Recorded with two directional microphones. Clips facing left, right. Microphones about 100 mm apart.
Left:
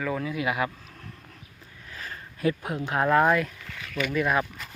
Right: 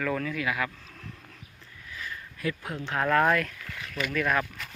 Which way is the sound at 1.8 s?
40° left (ahead or behind).